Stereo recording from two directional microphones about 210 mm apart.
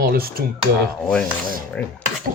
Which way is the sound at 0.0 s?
45° right (ahead or behind).